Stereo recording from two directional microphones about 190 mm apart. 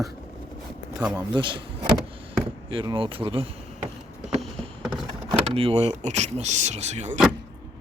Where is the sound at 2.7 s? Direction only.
25° right (ahead or behind).